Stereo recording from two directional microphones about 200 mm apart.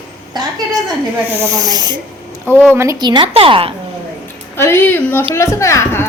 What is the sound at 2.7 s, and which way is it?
A woman's voice, 15° right (ahead or behind).